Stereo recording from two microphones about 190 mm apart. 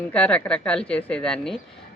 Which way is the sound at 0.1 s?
5° left (ahead or behind).